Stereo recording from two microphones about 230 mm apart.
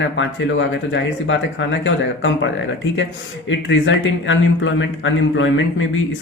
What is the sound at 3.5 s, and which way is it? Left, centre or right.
A man's voice, left.